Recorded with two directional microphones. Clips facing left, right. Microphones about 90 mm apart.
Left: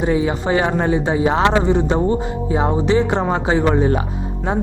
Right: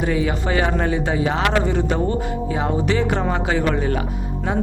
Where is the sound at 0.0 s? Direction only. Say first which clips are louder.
Left 3 dB; 25° left (ahead or behind).